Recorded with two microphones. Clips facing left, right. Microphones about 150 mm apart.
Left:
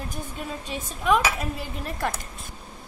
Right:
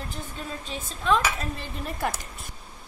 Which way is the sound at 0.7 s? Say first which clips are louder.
Left 2 dB; 15° left (ahead or behind).